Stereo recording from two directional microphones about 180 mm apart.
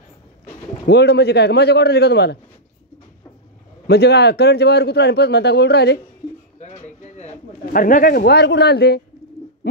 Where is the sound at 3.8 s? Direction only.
65° left (ahead or behind).